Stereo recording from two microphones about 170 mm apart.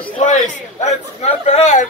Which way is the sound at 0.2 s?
45° left (ahead or behind).